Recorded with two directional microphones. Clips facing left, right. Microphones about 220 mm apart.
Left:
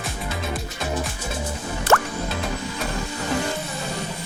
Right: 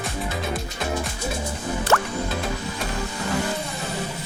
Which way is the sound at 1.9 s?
50° left (ahead or behind).